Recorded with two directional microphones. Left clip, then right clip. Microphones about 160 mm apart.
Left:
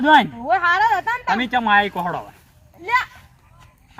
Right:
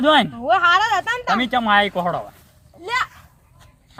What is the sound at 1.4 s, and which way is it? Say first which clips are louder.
Speech: even; 55° right (ahead or behind).